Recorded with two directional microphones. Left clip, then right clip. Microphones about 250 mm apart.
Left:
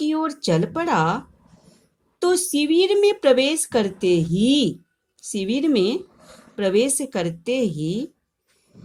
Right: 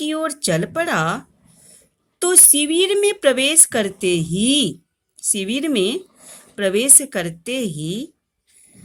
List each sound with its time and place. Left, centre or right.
0.0 s speech: right